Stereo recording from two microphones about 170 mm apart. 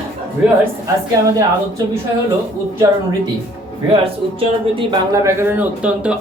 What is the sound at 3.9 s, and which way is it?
Speech, 35° right (ahead or behind).